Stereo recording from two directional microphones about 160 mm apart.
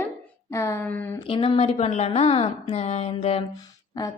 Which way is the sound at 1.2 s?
35° left (ahead or behind).